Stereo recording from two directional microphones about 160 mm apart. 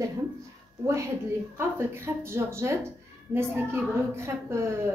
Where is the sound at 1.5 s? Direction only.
15° right (ahead or behind).